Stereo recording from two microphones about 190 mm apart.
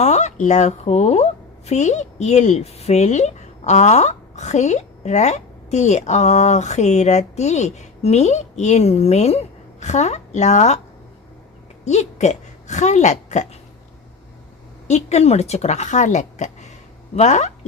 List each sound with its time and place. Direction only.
0.0 s a woman's voice: 35° left (ahead or behind)
11.9 s a woman's voice: 35° left (ahead or behind)
14.8 s a woman's voice: 35° left (ahead or behind)